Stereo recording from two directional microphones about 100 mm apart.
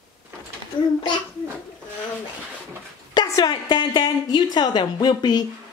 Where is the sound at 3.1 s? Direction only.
45° left (ahead or behind).